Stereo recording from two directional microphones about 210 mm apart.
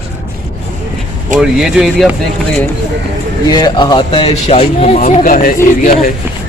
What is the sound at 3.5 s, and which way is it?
Speech, 20° left (ahead or behind).